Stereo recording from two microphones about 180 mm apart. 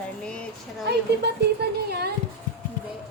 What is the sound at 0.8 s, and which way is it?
Speech, 65° right (ahead or behind).